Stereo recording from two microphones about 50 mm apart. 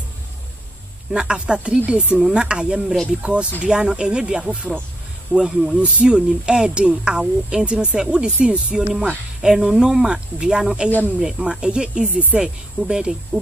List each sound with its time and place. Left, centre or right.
1.1 s speech: centre
2.1 s speech: centre
5.8 s speech: right
9.4 s speech: centre